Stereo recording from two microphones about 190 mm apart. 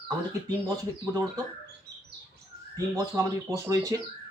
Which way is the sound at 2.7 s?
15° right (ahead or behind).